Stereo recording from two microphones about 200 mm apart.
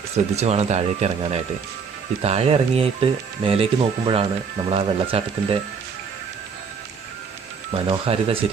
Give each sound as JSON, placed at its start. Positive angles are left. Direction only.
{"t": 0.1, "sound": "speech", "side_deg": -30}
{"t": 7.9, "sound": "speech", "side_deg": -30}